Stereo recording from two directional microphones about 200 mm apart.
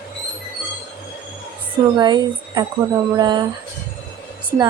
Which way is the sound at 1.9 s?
20° right (ahead or behind).